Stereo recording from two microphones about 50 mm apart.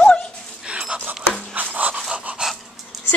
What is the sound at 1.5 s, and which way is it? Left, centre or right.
Pant, right.